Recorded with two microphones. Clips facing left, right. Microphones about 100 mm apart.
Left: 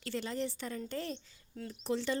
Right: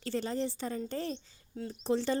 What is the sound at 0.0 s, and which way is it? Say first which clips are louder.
A woman's voice: right 3 dB; 35° right (ahead or behind).